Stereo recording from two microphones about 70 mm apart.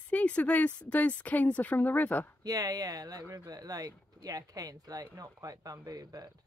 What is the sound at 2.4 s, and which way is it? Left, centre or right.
Speech, right.